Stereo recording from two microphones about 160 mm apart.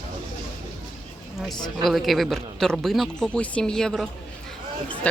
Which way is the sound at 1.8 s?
Centre (ahead or behind).